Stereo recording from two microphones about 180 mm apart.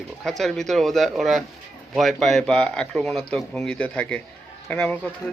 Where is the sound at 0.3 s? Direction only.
Centre (ahead or behind).